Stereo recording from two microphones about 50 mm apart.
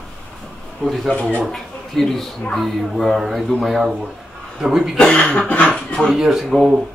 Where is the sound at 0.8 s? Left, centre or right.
Centre.